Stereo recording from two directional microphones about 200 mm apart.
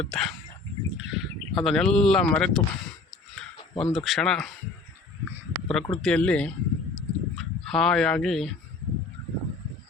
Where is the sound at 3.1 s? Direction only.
Centre (ahead or behind).